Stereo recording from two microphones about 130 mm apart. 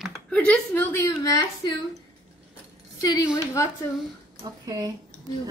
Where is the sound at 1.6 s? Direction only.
35° left (ahead or behind).